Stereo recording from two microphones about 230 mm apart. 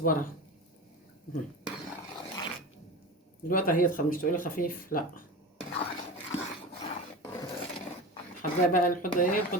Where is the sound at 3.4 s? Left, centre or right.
Left.